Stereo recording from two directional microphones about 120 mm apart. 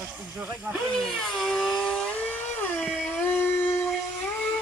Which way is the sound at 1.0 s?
Centre (ahead or behind).